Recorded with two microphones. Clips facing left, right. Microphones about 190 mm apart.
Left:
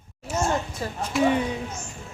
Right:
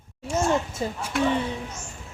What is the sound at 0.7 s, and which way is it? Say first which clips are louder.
Speech: right 3 dB; 25° right (ahead or behind).